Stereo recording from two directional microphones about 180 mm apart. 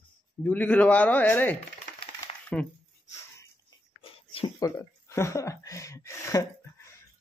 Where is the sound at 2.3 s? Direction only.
30° left (ahead or behind).